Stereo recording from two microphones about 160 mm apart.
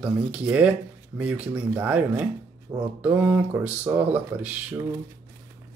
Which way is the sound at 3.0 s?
10° right (ahead or behind).